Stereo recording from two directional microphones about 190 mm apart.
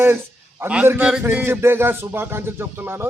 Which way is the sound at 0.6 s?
10° right (ahead or behind).